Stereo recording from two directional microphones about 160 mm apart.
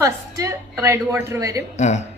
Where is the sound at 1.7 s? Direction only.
45° left (ahead or behind).